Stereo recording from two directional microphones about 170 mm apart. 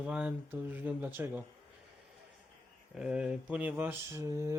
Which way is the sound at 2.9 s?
5° right (ahead or behind).